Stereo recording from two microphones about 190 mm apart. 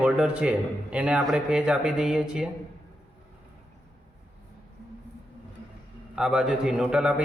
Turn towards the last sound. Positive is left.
turn(degrees=-5)  # may be behind; listen again after turning